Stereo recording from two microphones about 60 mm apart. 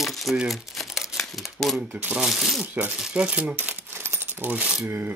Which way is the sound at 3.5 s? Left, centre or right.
Right.